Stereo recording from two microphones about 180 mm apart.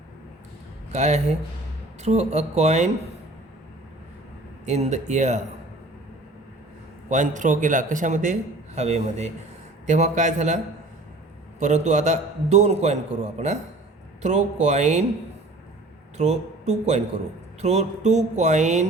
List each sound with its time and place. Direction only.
0.9 s a man's voice: 40° right (ahead or behind)
4.6 s a man's voice: 40° right (ahead or behind)
7.1 s a man's voice: 45° right (ahead or behind)
11.6 s a man's voice: 40° right (ahead or behind)
14.2 s a man's voice: 40° right (ahead or behind)
16.1 s a man's voice: 35° right (ahead or behind)